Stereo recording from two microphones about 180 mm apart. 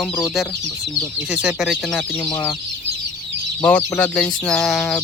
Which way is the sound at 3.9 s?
5° left (ahead or behind).